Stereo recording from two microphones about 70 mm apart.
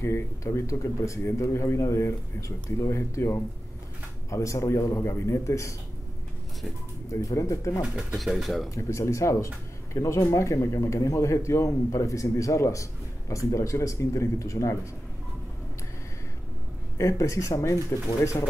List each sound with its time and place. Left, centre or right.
0.0 s speech: left
7.1 s speech: left
8.2 s speech: centre
8.6 s speech: left
17.0 s speech: left